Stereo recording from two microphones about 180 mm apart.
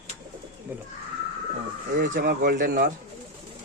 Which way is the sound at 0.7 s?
10° right (ahead or behind).